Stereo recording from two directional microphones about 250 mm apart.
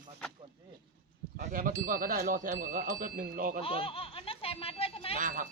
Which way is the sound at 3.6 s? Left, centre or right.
Left.